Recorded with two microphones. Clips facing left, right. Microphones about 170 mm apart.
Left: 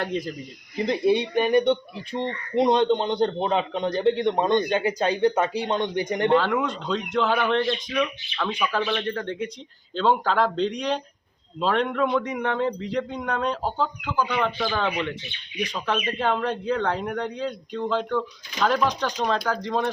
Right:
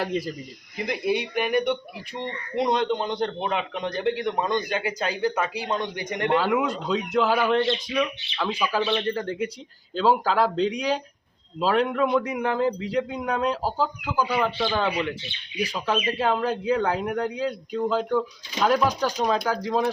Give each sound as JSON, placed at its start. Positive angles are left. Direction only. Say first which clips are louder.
{"t": 0.0, "sound": "a man's voice", "louder": "right 1 dB", "side_deg": -5}
{"t": 1.2, "sound": "speech", "louder": "left 4 dB", "side_deg": 30}
{"t": 6.3, "sound": "a man's voice", "louder": "right 1 dB", "side_deg": -5}
{"t": 8.8, "sound": "speech", "louder": "right 1 dB", "side_deg": -20}
{"t": 9.1, "sound": "a man's voice", "louder": "right 1 dB", "side_deg": -5}